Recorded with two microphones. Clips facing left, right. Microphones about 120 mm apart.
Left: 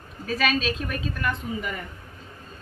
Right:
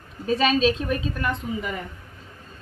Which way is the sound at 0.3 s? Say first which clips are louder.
Right 5 dB; 25° right (ahead or behind).